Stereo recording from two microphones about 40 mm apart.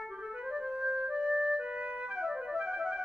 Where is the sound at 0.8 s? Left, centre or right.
Right.